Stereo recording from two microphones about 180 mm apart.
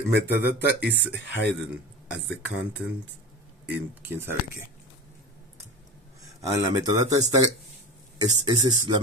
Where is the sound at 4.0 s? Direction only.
15° right (ahead or behind).